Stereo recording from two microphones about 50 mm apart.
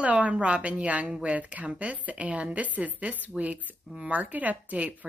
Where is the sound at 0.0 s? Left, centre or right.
Right.